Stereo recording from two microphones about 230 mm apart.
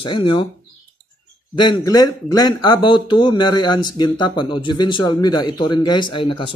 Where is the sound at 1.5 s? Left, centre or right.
Centre.